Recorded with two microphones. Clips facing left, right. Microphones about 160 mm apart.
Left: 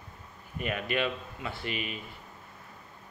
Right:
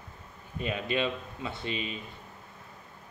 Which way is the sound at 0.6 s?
20° right (ahead or behind).